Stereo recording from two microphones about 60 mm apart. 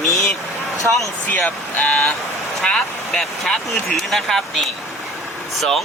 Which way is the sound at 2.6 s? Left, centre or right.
Centre.